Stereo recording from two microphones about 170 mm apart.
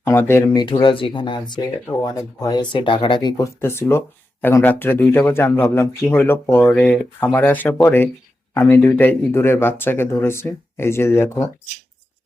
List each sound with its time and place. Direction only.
0.0 s speech: 15° left (ahead or behind)
0.5 s speech: 30° left (ahead or behind)